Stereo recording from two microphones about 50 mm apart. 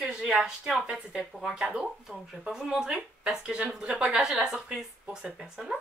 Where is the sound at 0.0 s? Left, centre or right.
Centre.